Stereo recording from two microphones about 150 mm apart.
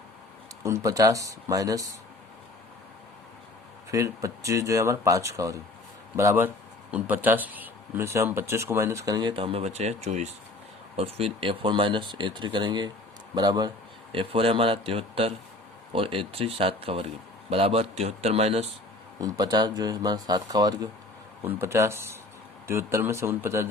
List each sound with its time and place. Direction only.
0.6 s speech: 20° right (ahead or behind)
3.9 s speech: 20° right (ahead or behind); by 18.7 s 45° right (ahead or behind)
19.2 s speech: 25° right (ahead or behind)